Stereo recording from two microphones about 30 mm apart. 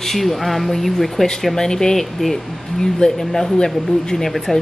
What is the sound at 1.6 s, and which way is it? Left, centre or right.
Speech, centre.